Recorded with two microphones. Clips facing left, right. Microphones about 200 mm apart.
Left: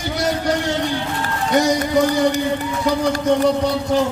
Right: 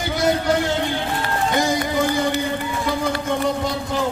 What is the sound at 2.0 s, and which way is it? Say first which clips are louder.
A man's voice: left 5 dB; 40° left (ahead or behind).